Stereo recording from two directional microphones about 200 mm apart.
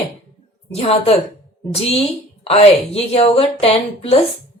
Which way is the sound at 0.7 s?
30° left (ahead or behind).